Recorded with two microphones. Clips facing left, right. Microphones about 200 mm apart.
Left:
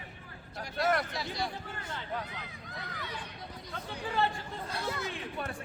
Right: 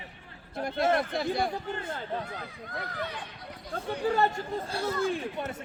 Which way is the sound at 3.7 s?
45° right (ahead or behind).